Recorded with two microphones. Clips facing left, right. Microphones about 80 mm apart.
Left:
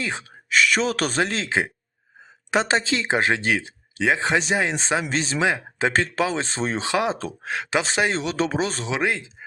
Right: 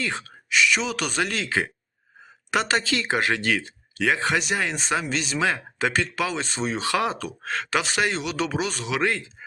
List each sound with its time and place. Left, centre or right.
0.0 s speech: centre
0.5 s speech: left
5.4 s speech: left
6.8 s speech: left
9.0 s speech: centre